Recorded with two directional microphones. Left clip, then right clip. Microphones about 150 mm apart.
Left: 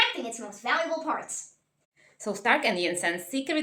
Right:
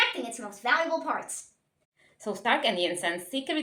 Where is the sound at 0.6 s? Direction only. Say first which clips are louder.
Right 1 dB; 35° right (ahead or behind).